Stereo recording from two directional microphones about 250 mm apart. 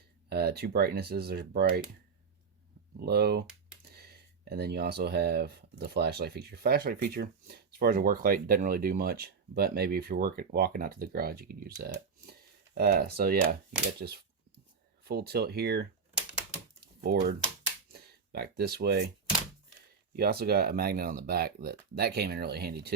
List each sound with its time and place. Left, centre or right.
0.3 s speech: right
3.1 s speech: right
16.8 s typing: right
17.9 s speech: right
20.1 s speech: right